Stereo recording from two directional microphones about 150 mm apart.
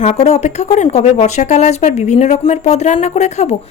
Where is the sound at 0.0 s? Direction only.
50° left (ahead or behind).